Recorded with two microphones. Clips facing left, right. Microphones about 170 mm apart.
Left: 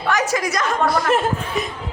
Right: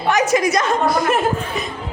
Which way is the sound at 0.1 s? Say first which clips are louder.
Right 5 dB; 20° right (ahead or behind).